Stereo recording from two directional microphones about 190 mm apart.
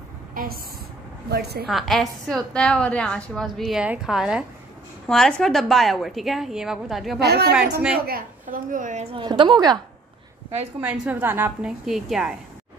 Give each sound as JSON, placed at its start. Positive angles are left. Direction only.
{"t": 0.4, "sound": "a sound", "side_deg": -45}
{"t": 1.3, "sound": "a woman's voice", "side_deg": -55}
{"t": 1.7, "sound": "a woman's voice", "side_deg": 0}
{"t": 7.2, "sound": "a woman's voice", "side_deg": -60}
{"t": 10.8, "sound": "a woman's voice", "side_deg": -10}